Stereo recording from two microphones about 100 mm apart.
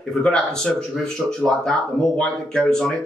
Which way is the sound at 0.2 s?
10° left (ahead or behind).